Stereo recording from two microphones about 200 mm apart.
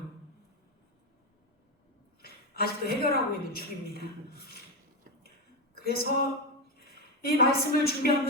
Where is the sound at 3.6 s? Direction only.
50° left (ahead or behind).